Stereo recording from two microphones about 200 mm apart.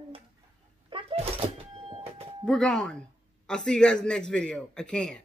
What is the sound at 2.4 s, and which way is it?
A man's voice, 5° left (ahead or behind).